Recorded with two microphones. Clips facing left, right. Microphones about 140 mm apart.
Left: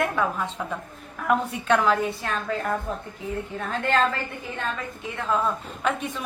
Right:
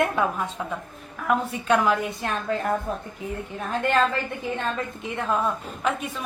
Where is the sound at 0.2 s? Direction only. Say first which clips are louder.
Right 1 dB; 15° right (ahead or behind).